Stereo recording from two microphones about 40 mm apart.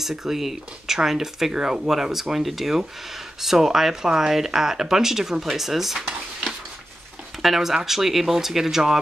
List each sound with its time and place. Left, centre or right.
0.0 s speech: centre
1.5 s speech: centre
1.9 s speech: centre